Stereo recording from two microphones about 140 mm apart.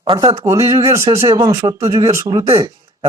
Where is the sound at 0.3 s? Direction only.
20° right (ahead or behind).